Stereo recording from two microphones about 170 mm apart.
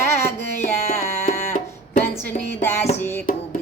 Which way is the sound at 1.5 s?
45° left (ahead or behind).